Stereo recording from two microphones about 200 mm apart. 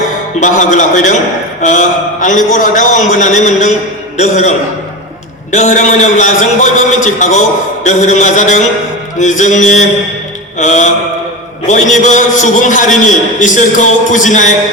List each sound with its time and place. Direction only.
0.3 s a man's voice: 40° left (ahead or behind)
2.2 s a man's voice: 40° left (ahead or behind)